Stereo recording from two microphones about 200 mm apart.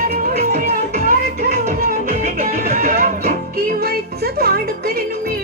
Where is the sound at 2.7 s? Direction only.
40° right (ahead or behind).